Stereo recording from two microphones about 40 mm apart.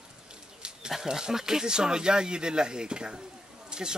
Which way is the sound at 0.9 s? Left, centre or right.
Centre.